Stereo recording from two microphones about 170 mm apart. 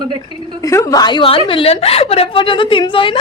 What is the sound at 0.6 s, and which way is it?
A woman's voice, 20° left (ahead or behind).